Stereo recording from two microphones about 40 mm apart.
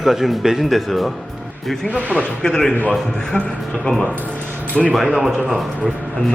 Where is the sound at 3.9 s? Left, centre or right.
Left.